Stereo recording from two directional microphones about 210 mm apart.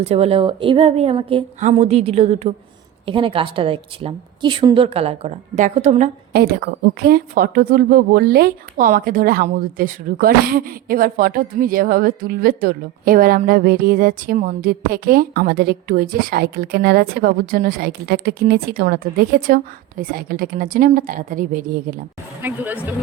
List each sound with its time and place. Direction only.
0.0 s a woman's voice: 30° right (ahead or behind)
6.3 s a woman's voice: 50° right (ahead or behind)
22.4 s speech: 10° right (ahead or behind)